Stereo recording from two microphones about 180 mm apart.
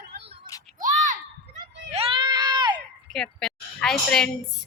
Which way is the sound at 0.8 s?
45° right (ahead or behind).